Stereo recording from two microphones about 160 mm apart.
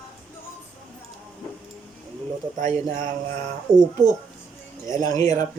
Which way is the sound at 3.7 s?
45° right (ahead or behind).